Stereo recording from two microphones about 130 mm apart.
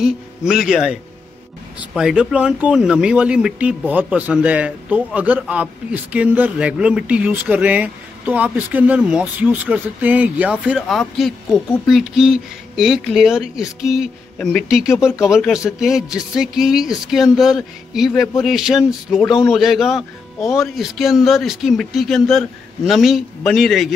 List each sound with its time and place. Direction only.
0.0 s speech: 5° right (ahead or behind)